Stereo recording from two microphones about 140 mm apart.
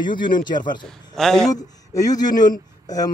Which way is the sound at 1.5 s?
25° left (ahead or behind).